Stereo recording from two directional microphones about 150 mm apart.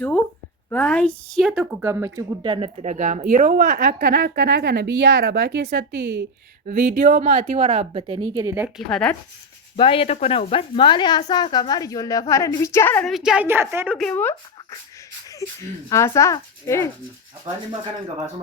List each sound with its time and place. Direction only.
0.7 s a woman's voice: 10° left (ahead or behind)
1.4 s speech: centre (ahead or behind)
1.7 s a woman's voice: 15° right (ahead or behind)
2.4 s speech: 35° right (ahead or behind)
2.8 s speech: 55° right (ahead or behind); by 6.2 s 90° right
6.7 s speech: 60° right (ahead or behind); by 8.7 s 15° right (ahead or behind)
8.9 s speech: 5° left (ahead or behind)
9.7 s a woman's voice: 35° left (ahead or behind); by 13.1 s 15° left (ahead or behind)
13.1 s a woman's voice: 5° right (ahead or behind)
14.0 s a woman's voice: 10° left (ahead or behind)